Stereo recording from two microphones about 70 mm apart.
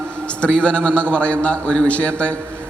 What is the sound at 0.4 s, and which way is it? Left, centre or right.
A man's voice, centre.